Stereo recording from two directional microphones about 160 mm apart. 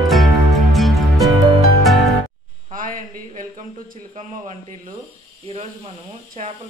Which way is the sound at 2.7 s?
60° right (ahead or behind).